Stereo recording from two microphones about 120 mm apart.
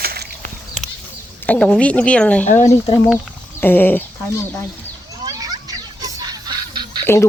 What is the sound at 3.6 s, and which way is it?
Speech, 15° left (ahead or behind).